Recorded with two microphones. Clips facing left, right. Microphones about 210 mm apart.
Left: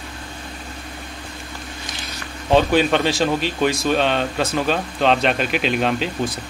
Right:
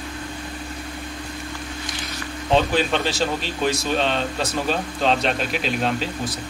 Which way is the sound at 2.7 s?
Centre (ahead or behind).